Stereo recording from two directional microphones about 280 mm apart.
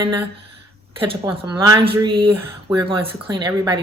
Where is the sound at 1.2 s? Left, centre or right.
Centre.